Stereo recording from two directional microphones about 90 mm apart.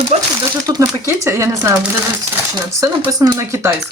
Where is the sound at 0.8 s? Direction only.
30° right (ahead or behind).